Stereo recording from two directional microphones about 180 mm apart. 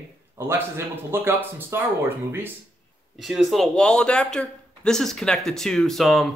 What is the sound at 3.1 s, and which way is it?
A man's voice, centre (ahead or behind).